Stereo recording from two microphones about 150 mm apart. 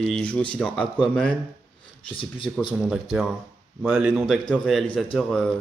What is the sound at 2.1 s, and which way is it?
Speech, 35° left (ahead or behind).